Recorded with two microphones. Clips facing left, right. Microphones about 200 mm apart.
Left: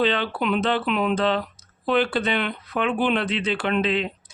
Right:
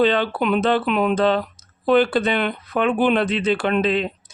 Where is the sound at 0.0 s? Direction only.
45° right (ahead or behind).